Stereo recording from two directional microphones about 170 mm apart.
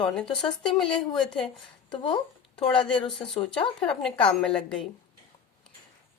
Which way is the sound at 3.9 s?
5° left (ahead or behind).